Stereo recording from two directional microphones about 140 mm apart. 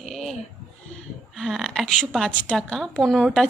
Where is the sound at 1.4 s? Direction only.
5° left (ahead or behind).